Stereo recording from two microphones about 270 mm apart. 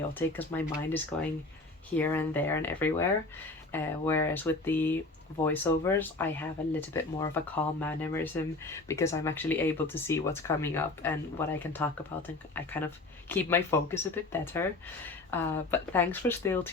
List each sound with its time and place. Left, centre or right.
0.1 s speech: centre